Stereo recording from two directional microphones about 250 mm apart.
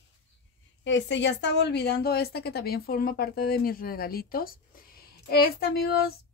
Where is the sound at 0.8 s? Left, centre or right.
Left.